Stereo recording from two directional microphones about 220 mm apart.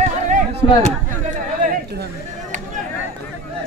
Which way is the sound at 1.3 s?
40° right (ahead or behind).